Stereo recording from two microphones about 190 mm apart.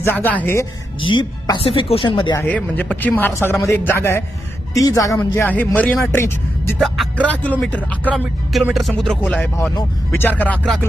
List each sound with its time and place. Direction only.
0.0 s speech: 10° left (ahead or behind)
1.1 s speech: 25° left (ahead or behind)
2.4 s speech: 10° left (ahead or behind)
6.7 s speech: centre (ahead or behind)
8.1 s speech: 5° right (ahead or behind)